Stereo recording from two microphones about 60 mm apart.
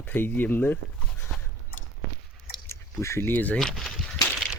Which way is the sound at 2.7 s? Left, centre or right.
Left.